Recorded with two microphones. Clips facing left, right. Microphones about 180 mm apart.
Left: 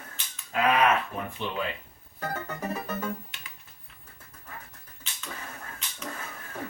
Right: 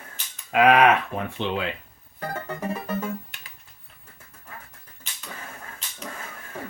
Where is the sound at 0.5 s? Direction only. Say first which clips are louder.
Right 6 dB; 80° right.